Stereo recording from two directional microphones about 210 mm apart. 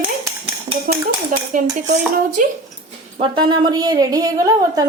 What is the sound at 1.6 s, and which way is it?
Speech, 40° right (ahead or behind).